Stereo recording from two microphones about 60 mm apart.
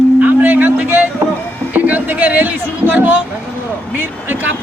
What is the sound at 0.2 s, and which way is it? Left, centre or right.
Music, right.